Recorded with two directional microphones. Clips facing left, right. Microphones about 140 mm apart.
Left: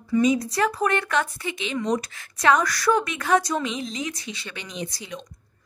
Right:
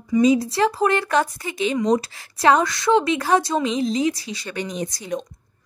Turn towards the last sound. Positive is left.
turn(degrees=-45)  # may be behind; listen again after turning